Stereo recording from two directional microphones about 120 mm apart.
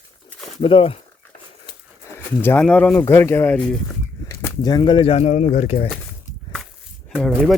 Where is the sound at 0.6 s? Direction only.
50° left (ahead or behind).